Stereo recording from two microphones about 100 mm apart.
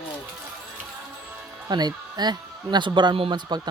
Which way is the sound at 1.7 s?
45° right (ahead or behind).